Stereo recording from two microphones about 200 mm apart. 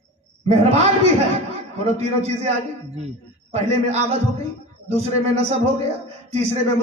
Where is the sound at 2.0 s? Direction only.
35° right (ahead or behind).